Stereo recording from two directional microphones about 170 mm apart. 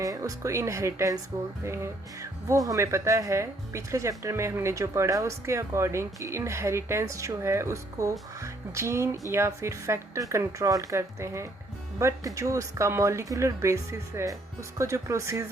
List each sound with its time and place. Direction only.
0.0 s speech: 20° right (ahead or behind)